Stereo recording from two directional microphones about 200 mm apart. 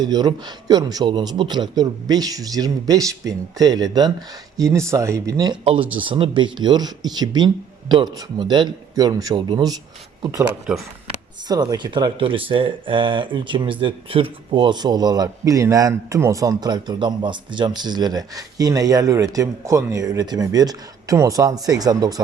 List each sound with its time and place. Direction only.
0.0 s speech: 20° right (ahead or behind)
11.4 s speech: 20° right (ahead or behind)